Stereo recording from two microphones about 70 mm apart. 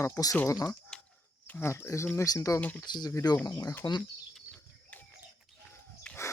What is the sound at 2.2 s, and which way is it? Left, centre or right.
Speech, left.